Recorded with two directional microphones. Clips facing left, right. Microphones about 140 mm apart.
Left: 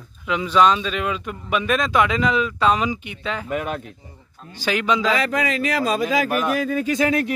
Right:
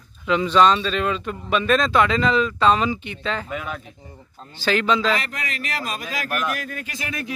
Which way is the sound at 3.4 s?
60° left (ahead or behind).